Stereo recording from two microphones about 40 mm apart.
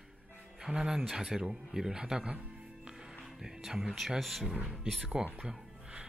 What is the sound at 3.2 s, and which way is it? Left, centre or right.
A man's voice, centre.